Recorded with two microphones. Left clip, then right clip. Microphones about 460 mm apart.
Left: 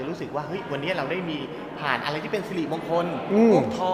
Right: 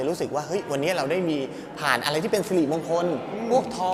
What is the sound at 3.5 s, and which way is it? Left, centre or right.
Speech, right.